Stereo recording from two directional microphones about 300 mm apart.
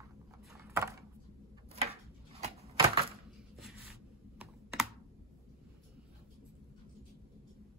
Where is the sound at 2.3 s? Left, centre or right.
Right.